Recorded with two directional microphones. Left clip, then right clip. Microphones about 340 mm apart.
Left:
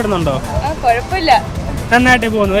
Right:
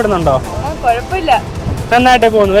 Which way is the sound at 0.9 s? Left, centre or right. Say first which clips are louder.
Even; left.